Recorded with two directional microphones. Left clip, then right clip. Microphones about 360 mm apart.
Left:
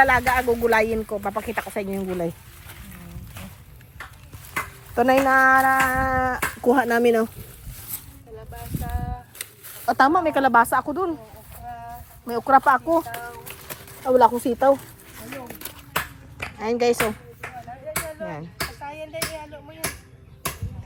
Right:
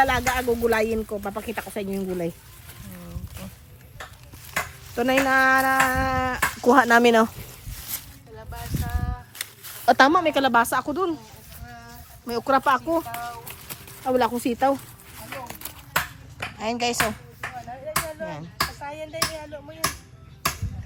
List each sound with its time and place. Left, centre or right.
0.0 s speech: centre
4.9 s speech: centre
9.8 s speech: centre
12.2 s speech: centre
16.6 s speech: centre
18.2 s speech: right
18.8 s a sound: right